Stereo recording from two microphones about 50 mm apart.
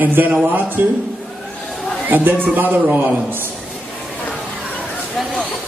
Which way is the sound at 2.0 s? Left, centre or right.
Right.